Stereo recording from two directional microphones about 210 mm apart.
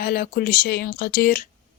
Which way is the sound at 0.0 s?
45° left (ahead or behind).